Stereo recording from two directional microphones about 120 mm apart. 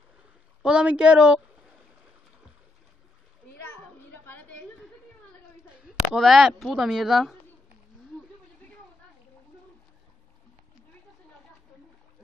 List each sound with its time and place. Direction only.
0.6 s a woman's voice: 5° right (ahead or behind)
4.1 s a sound: 15° left (ahead or behind)
5.7 s a woman's voice: centre (ahead or behind)